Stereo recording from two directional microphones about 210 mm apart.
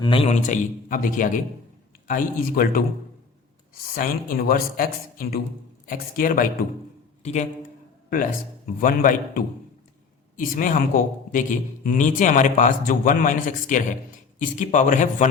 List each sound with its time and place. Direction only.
0.0 s a man's voice: 25° left (ahead or behind); by 2.8 s 40° left (ahead or behind)
3.9 s a man's voice: 40° left (ahead or behind)